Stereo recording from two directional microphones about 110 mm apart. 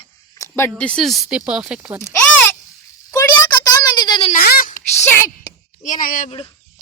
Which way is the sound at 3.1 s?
35° left (ahead or behind).